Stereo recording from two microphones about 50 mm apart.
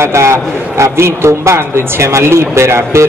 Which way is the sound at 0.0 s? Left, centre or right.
Right.